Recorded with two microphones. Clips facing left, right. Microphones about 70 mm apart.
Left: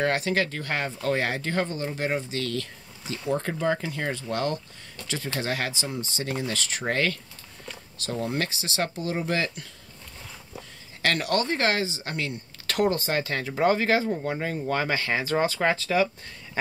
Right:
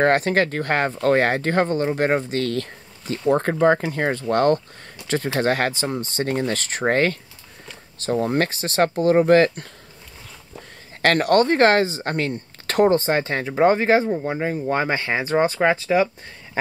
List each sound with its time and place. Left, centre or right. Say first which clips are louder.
0.0 s speech: right 7 dB; right
11.0 s speech: right 8 dB; right